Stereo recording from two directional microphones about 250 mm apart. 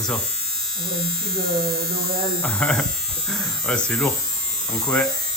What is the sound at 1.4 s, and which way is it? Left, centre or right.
Hum, right.